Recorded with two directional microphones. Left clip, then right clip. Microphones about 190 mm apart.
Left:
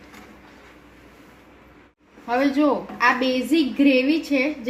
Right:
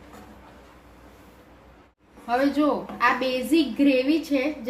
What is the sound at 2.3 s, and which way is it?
A woman's voice, 25° left (ahead or behind).